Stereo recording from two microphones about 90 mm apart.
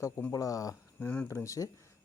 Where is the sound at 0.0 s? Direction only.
35° left (ahead or behind).